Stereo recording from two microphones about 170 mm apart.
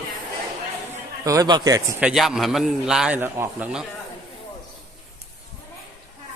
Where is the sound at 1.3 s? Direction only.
25° right (ahead or behind).